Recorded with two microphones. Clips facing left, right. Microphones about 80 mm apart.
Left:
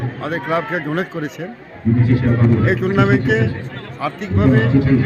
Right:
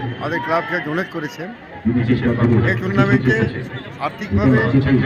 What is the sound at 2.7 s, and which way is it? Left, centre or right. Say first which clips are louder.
A man's voice: left 2 dB; centre.